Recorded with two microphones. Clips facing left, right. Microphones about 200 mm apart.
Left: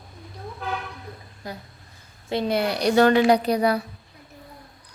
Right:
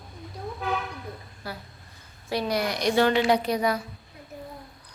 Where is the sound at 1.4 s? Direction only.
20° left (ahead or behind); by 3.6 s 40° left (ahead or behind).